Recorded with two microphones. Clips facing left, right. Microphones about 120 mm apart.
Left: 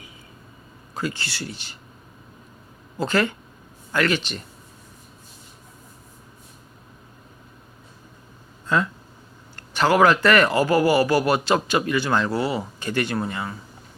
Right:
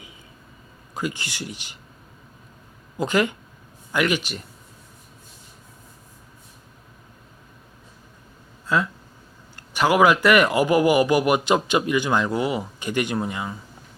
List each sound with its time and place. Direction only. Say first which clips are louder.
0.9 s a man's voice: even; 15° right (ahead or behind)
3.0 s a man's voice: right 1 dB; 15° right (ahead or behind)
8.6 s a man's voice: even; 5° right (ahead or behind)